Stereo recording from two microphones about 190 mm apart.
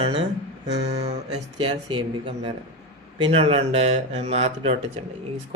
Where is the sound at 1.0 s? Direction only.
30° right (ahead or behind).